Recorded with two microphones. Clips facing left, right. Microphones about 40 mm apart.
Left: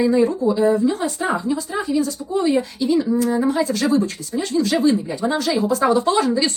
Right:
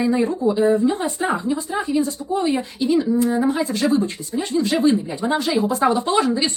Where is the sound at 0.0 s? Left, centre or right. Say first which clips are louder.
Left 2 dB; centre.